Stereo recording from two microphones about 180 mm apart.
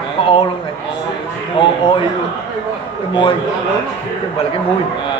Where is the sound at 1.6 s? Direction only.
30° left (ahead or behind).